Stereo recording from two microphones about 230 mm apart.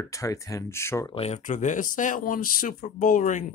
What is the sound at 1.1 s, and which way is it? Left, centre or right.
Speech, left.